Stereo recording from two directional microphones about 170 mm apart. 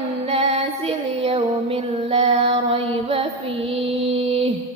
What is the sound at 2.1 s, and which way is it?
Mantra, 35° right (ahead or behind).